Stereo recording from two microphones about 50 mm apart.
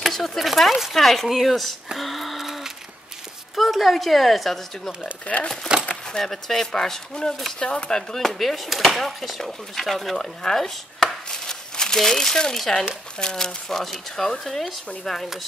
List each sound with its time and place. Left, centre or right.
0.0 s a sound: centre
0.4 s a woman's voice: centre
2.0 s a sound: centre
3.5 s a woman's voice: centre
5.2 s speech: left
6.0 s speech: centre
8.2 s a woman's voice: centre